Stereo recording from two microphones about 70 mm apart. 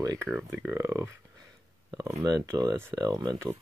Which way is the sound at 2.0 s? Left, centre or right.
Right.